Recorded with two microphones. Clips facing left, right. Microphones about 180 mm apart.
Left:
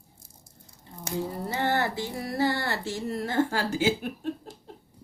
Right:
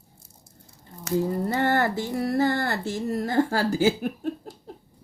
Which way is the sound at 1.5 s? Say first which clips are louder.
Right 2 dB; 50° right (ahead or behind).